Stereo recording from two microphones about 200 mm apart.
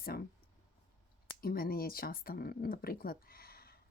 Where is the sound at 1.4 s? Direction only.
50° left (ahead or behind).